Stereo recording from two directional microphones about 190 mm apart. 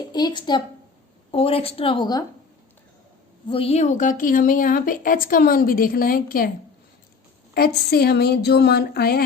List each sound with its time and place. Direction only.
0.1 s a woman's voice: 20° left (ahead or behind)
3.5 s a woman's voice: 30° left (ahead or behind); by 6.5 s 50° left (ahead or behind)
7.5 s speech: 55° left (ahead or behind)